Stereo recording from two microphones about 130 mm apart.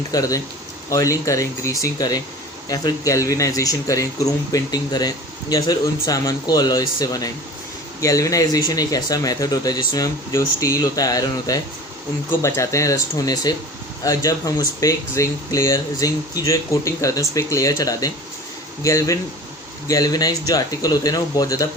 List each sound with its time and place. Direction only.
0.1 s speech: 25° left (ahead or behind)